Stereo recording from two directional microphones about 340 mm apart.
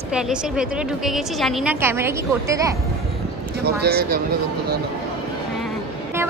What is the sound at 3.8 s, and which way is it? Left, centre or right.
Speech, right.